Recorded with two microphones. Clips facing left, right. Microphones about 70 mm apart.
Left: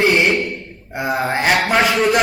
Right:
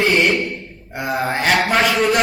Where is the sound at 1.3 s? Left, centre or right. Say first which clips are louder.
Even; centre.